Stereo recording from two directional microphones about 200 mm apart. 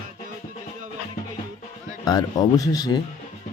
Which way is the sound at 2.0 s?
20° left (ahead or behind).